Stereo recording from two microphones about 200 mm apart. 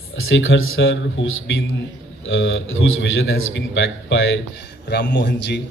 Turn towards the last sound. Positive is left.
turn(degrees=60)  # may be behind; listen again after turning